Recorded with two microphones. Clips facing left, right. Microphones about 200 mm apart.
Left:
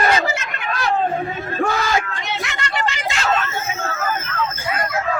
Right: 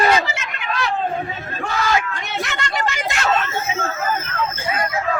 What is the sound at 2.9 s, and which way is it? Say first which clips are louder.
Vehicle: right 1 dB; 60° right (ahead or behind).